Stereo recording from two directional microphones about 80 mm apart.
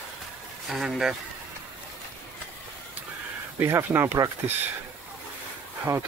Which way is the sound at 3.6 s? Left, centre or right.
Right.